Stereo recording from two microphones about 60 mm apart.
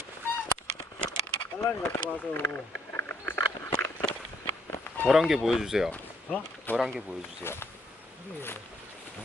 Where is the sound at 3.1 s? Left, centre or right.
Left.